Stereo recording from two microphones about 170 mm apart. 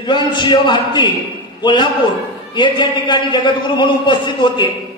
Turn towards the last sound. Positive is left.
turn(degrees=25)  # may be behind; listen again after turning